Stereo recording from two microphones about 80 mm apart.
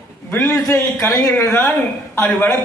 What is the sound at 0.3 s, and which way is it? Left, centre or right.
A man's voice, left.